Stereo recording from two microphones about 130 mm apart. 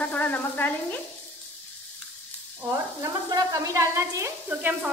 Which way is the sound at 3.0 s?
25° right (ahead or behind).